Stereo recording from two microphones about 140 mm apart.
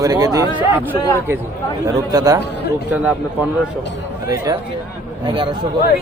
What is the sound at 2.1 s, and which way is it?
Speech, 25° right (ahead or behind).